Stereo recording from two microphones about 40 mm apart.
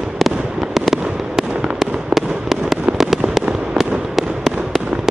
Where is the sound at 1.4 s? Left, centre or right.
Right.